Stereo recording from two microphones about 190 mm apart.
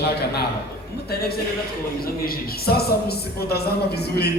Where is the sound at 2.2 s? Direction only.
55° left (ahead or behind).